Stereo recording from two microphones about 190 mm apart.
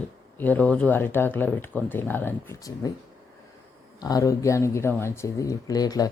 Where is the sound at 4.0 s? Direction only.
20° left (ahead or behind).